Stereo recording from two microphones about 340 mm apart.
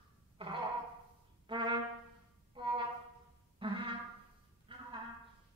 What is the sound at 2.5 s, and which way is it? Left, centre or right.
Music, centre.